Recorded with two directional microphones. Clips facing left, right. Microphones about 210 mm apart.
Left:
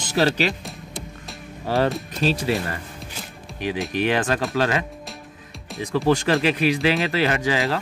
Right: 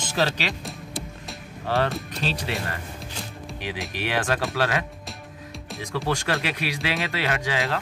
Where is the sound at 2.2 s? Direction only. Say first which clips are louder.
Left 8 dB; 45° left (ahead or behind).